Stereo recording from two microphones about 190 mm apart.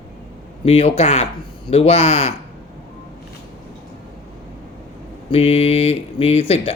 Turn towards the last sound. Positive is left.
turn(degrees=30)  # may be behind; listen again after turning